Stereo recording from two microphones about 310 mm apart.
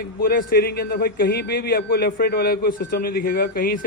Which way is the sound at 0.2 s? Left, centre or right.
Left.